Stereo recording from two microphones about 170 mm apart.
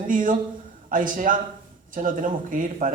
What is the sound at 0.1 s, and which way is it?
Speech, 50° right (ahead or behind).